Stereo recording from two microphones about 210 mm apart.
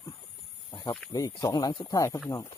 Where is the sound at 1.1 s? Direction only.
15° left (ahead or behind).